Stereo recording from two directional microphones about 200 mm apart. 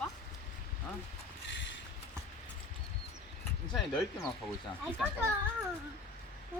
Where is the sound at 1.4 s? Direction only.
65° left (ahead or behind).